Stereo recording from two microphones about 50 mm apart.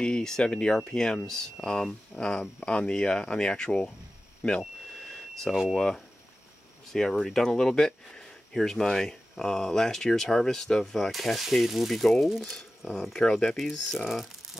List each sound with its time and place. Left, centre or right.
0.0 s speech: centre
4.4 s a sound: centre
5.3 s speech: centre
6.9 s speech: centre
11.1 s speech: centre
12.9 s speech: centre